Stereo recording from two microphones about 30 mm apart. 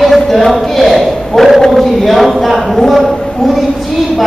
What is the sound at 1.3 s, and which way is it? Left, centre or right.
Speech, left.